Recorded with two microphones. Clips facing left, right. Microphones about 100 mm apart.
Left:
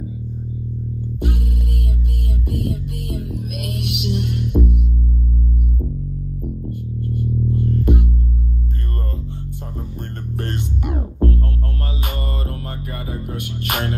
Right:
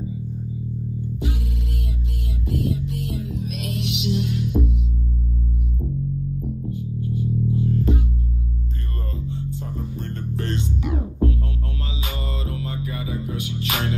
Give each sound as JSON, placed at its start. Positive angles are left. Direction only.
{"t": 2.5, "sound": "music", "side_deg": 55}
{"t": 6.7, "sound": "music", "side_deg": 55}
{"t": 9.3, "sound": "music", "side_deg": 50}
{"t": 12.4, "sound": "music", "side_deg": 50}